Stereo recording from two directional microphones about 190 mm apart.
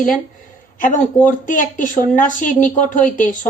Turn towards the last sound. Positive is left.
turn(degrees=45)  # may be behind; listen again after turning